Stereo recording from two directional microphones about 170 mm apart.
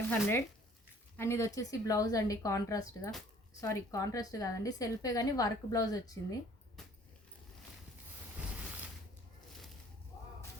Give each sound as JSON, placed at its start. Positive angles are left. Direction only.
{"t": 0.1, "sound": "a woman's voice", "side_deg": 10}
{"t": 6.8, "sound": "keys jangling", "side_deg": 0}